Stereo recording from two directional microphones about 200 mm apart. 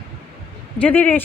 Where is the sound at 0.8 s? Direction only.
10° left (ahead or behind).